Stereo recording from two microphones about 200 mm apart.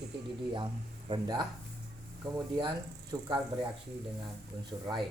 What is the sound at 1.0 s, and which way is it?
Speech, 25° right (ahead or behind).